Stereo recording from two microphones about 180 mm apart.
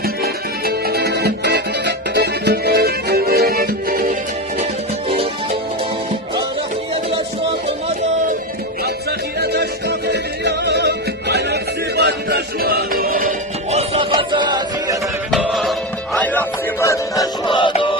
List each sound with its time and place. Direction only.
0.0 s music: 60° right (ahead or behind)
5.0 s music: 35° right (ahead or behind)
9.4 s music: 65° right (ahead or behind)
13.7 s music: 35° right (ahead or behind)
15.3 s music: centre (ahead or behind)
16.1 s music: 10° left (ahead or behind); by 17.9 s 25° left (ahead or behind)